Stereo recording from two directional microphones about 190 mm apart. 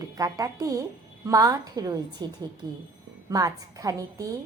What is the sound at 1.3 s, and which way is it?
Child singing, 20° right (ahead or behind).